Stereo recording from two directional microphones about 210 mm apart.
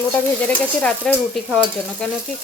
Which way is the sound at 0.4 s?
5° left (ahead or behind).